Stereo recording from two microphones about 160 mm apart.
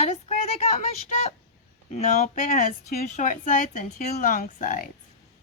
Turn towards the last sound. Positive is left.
turn(degrees=55)  # may be behind; listen again after turning